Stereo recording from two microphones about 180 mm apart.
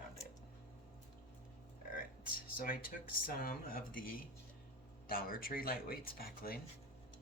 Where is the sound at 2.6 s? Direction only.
50° left (ahead or behind).